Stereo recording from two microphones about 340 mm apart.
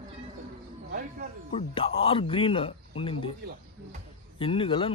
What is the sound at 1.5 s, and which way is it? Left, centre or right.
A man's voice, centre.